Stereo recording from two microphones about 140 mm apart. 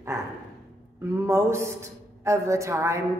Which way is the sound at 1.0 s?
20° right (ahead or behind).